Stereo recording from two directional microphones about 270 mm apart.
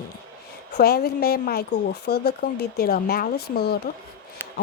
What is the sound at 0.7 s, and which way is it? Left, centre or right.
A woman's voice, left.